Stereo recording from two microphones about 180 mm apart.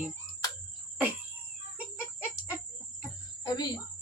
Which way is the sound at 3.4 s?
25° left (ahead or behind).